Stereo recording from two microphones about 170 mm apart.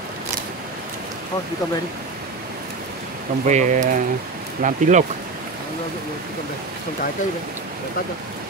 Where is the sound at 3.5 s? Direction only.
45° right (ahead or behind).